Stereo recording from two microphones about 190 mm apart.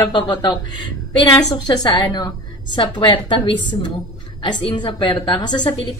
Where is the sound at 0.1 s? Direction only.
25° left (ahead or behind).